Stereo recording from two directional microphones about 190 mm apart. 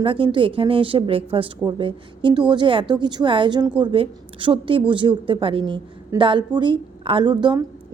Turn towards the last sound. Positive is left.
turn(degrees=-25)  # may be behind; listen again after turning